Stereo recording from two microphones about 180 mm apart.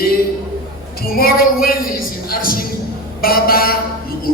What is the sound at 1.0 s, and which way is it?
A woman's voice, 55° left (ahead or behind).